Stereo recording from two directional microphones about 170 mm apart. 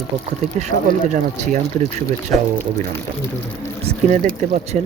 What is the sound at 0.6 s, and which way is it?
Speech, 45° right (ahead or behind).